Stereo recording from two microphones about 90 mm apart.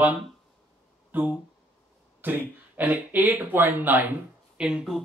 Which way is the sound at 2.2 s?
20° right (ahead or behind).